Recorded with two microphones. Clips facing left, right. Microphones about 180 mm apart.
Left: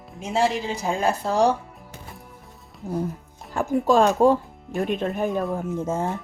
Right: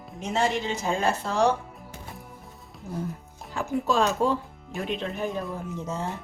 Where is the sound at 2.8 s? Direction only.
35° left (ahead or behind).